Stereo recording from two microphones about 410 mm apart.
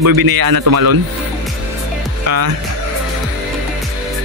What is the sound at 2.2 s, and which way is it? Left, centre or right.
Speech, right.